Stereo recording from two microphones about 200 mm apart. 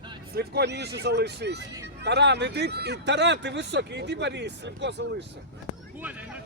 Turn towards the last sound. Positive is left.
turn(degrees=-10)  # may be behind; listen again after turning